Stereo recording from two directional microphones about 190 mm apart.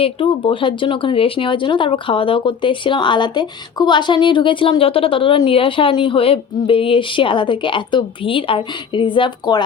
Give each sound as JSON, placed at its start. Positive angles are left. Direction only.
{"t": 0.0, "sound": "speech", "side_deg": 25}